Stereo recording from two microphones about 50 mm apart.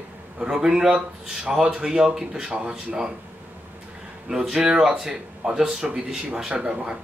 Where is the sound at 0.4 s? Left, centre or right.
Centre.